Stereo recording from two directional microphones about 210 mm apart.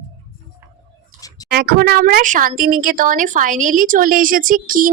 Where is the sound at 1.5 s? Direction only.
45° right (ahead or behind).